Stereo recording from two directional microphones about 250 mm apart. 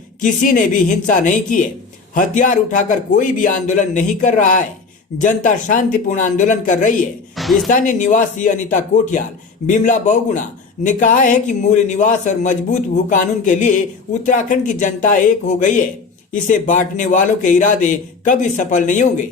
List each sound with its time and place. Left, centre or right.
0.2 s a man's voice: left
7.3 s speech: centre
7.7 s a man's voice: left